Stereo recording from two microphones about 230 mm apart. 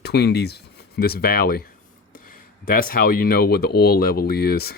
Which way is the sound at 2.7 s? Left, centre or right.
Left.